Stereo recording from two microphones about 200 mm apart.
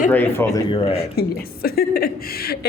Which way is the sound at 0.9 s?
55° left (ahead or behind).